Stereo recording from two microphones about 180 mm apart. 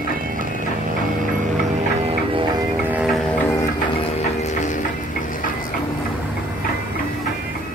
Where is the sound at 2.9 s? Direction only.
5° right (ahead or behind).